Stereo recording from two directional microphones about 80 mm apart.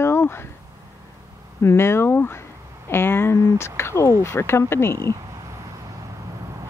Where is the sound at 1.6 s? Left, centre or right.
Left.